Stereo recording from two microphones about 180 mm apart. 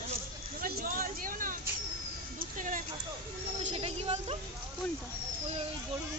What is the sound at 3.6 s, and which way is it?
Speech, 35° right (ahead or behind).